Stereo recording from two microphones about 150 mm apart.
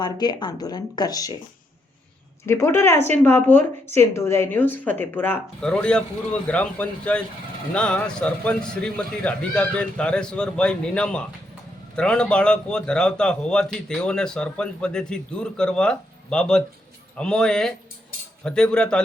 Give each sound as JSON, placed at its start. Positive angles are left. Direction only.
{"t": 0.0, "sound": "speech", "side_deg": 30}
{"t": 2.5, "sound": "a man's voice", "side_deg": 15}